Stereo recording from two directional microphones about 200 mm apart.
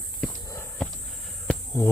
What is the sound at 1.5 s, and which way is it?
Insect, 10° left (ahead or behind).